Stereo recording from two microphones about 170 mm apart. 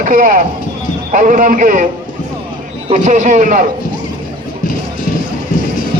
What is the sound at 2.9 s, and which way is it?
Speech, 45° right (ahead or behind).